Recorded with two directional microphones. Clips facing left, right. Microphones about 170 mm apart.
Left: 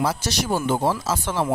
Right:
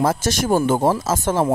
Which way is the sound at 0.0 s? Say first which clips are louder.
Right 5 dB; 50° right (ahead or behind).